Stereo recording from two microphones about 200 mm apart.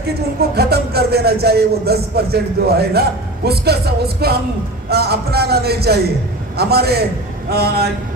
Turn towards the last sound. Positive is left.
turn(degrees=-50)  # may be behind; listen again after turning